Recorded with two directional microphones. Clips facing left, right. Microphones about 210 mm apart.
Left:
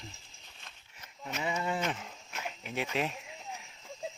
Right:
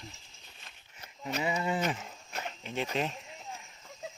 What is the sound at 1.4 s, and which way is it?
Speech, 5° right (ahead or behind).